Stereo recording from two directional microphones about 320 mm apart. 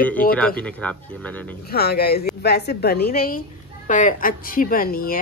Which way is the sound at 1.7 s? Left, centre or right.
Left.